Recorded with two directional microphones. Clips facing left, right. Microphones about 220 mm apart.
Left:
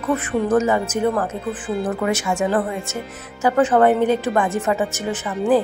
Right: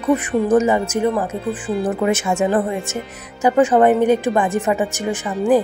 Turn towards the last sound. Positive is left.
turn(degrees=-15)  # may be behind; listen again after turning